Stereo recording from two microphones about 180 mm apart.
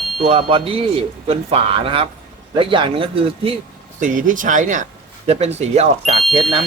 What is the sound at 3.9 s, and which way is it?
Speech, 45° right (ahead or behind).